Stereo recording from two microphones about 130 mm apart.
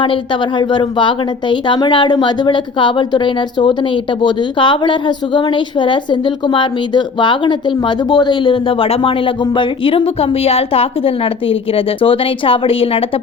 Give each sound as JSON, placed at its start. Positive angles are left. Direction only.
{"t": 0.6, "sound": "a woman's voice", "side_deg": 35}